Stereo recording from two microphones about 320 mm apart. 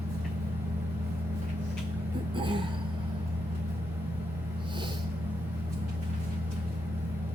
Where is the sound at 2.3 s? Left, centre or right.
Centre.